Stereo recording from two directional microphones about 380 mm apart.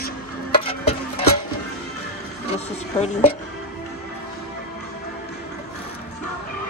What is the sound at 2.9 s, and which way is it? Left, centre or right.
Speech, centre.